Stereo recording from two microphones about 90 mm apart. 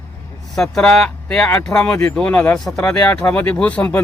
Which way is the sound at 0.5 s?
5° left (ahead or behind).